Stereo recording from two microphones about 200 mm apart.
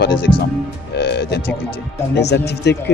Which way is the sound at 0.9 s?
55° left (ahead or behind).